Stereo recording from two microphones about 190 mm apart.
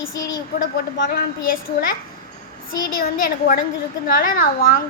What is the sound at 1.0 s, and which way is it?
Speech, 50° left (ahead or behind).